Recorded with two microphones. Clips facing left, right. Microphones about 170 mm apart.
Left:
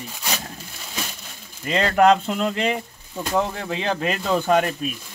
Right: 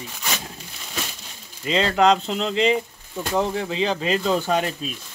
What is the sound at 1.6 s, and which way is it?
Speech, 50° left (ahead or behind).